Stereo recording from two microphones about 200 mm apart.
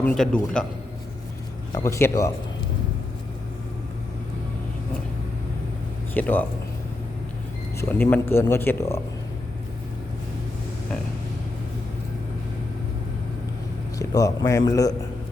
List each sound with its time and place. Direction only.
0.0 s a man's voice: 5° left (ahead or behind)
1.7 s speech: 15° left (ahead or behind)
6.1 s speech: 10° left (ahead or behind)
7.8 s speech: 10° left (ahead or behind)
14.0 s speech: 15° left (ahead or behind)